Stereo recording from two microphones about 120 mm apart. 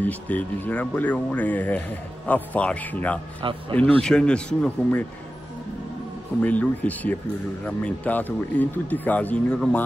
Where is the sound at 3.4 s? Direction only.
45° right (ahead or behind).